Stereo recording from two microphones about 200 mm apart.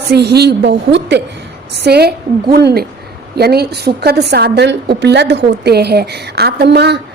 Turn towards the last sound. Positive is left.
turn(degrees=-55)  # may be behind; listen again after turning